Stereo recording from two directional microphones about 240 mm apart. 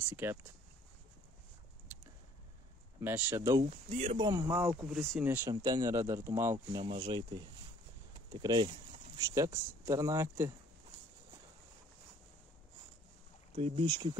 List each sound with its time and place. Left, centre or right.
0.1 s speech: centre
3.0 s speech: centre
3.7 s speech: right; by 10.5 s centre
13.6 s speech: right